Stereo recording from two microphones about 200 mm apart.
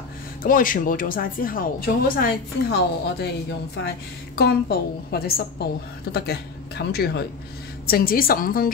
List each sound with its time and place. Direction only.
0.4 s speech: 45° left (ahead or behind)
4.4 s speech: 55° left (ahead or behind)